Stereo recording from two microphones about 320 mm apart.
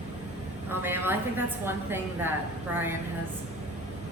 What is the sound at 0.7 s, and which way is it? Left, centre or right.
A woman's voice, centre.